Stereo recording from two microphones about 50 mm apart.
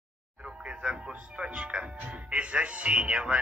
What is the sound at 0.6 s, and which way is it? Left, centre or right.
Speech, right.